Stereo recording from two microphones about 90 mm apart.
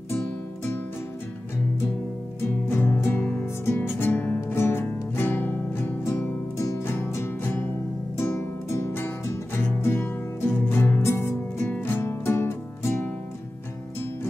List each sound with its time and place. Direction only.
2.7 s music: 25° left (ahead or behind)